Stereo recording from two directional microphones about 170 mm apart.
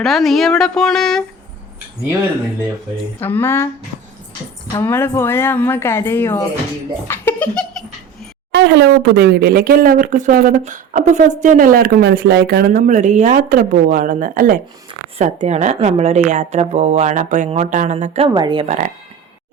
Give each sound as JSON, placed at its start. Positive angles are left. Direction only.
{"t": 0.0, "sound": "speech", "side_deg": 0}
{"t": 3.2, "sound": "speech", "side_deg": 10}
{"t": 4.8, "sound": "speech", "side_deg": 15}
{"t": 7.1, "sound": "a sound", "side_deg": 10}
{"t": 8.5, "sound": "speech", "side_deg": -80}
{"t": 15.2, "sound": "speech", "side_deg": -40}
{"t": 18.3, "sound": "speech", "side_deg": -25}
{"t": 18.6, "sound": "speech", "side_deg": -45}